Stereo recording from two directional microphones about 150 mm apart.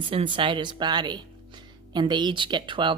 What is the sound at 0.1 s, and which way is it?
Speech, 35° right (ahead or behind).